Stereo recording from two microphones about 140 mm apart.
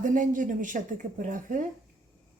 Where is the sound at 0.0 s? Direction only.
70° right (ahead or behind).